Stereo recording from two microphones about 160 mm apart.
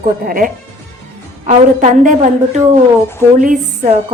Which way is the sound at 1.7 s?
55° right (ahead or behind).